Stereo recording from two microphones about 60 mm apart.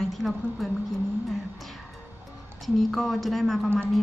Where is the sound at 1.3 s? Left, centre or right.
Centre.